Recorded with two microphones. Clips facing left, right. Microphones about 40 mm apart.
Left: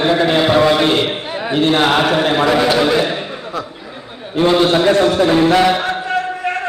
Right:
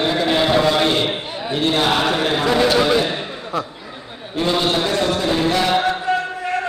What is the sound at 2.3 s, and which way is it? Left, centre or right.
Chant, left.